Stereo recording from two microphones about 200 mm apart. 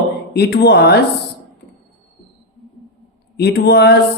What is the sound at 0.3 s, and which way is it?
Speech, 55° left (ahead or behind).